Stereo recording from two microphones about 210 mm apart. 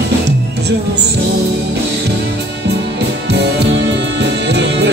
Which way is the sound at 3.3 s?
55° right (ahead or behind).